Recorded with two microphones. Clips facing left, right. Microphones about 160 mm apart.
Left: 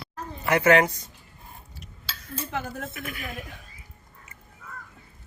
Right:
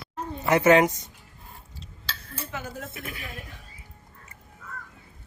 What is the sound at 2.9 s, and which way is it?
Speech, 30° right (ahead or behind).